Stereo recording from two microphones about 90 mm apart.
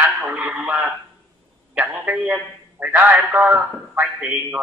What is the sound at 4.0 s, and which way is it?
Speech, 15° right (ahead or behind).